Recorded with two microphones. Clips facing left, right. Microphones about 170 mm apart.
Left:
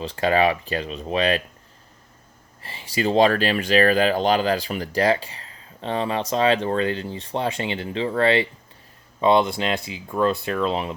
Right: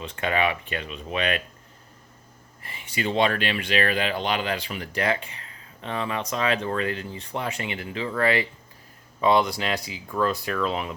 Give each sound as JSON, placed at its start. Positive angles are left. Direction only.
{"t": 0.0, "sound": "speech", "side_deg": 35}
{"t": 2.6, "sound": "speech", "side_deg": 30}